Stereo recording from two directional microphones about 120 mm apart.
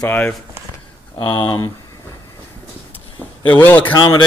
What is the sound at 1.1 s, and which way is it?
Speech, 40° left (ahead or behind).